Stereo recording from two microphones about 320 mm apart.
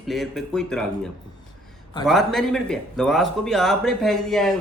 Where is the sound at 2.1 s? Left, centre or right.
Centre.